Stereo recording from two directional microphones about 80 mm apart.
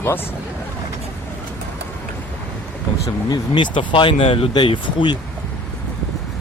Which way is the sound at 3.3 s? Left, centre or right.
Left.